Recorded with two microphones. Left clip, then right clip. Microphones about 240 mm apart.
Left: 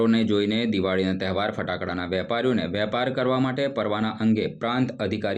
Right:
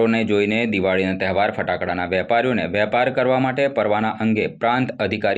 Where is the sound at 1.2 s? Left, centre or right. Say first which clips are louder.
Right 7 dB; centre.